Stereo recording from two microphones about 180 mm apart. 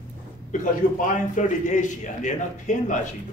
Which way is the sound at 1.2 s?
45° left (ahead or behind).